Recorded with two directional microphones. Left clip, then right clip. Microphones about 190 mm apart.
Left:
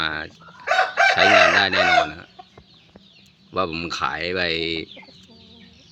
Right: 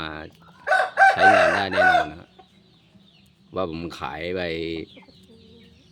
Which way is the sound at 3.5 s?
15° right (ahead or behind).